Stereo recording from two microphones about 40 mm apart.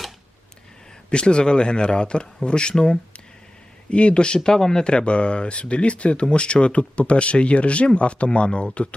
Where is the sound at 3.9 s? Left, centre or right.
Left.